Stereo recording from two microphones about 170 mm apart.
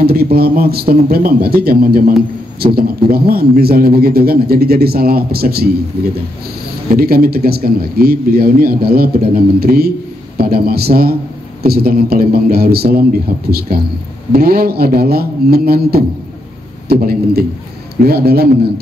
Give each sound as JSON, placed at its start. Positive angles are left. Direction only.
{"t": 0.0, "sound": "a man's voice", "side_deg": -65}
{"t": 6.9, "sound": "a man's voice", "side_deg": -60}